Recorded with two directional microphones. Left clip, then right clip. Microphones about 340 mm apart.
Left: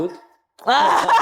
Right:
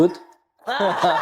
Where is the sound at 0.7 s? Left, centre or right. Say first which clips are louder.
Left 7 dB; left.